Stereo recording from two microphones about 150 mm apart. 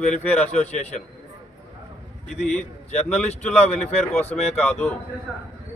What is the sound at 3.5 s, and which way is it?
Speech, 45° left (ahead or behind).